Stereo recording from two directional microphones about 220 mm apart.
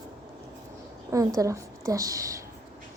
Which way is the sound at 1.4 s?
15° right (ahead or behind).